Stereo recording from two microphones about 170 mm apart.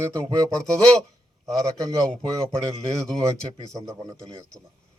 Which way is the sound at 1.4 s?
20° right (ahead or behind).